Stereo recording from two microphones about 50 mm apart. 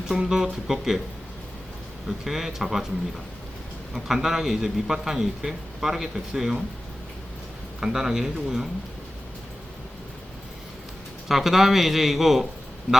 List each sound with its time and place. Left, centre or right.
0.1 s a man's voice: centre
2.0 s a man's voice: centre
3.9 s a man's voice: centre
7.8 s a man's voice: centre
11.3 s a man's voice: centre